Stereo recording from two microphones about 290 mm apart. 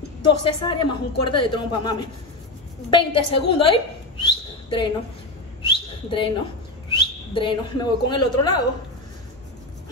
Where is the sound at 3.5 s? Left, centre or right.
Centre.